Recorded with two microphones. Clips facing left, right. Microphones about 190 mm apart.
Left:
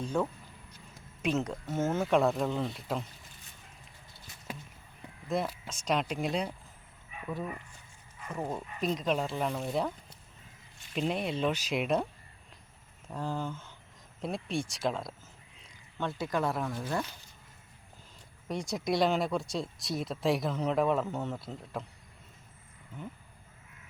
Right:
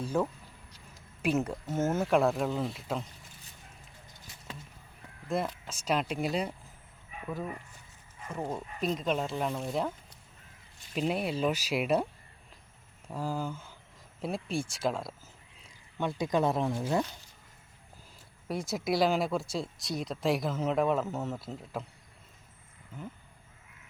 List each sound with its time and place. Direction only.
0.0 s speech: 5° right (ahead or behind)
5.3 s speech: centre (ahead or behind)
8.3 s speech: centre (ahead or behind)
10.9 s speech: 5° right (ahead or behind)
13.1 s speech: 5° right (ahead or behind)
16.0 s speech: 15° right (ahead or behind)
18.4 s speech: 5° right (ahead or behind)